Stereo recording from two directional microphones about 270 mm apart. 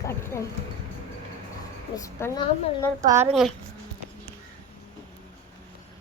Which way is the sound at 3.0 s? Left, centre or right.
Right.